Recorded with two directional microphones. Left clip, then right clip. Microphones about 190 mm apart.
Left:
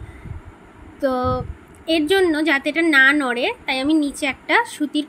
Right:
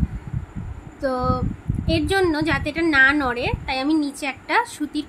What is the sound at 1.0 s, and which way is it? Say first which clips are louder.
Speech: left 2 dB; 15° left (ahead or behind).